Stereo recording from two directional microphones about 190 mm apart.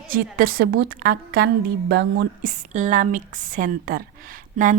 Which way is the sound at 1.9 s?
65° right (ahead or behind).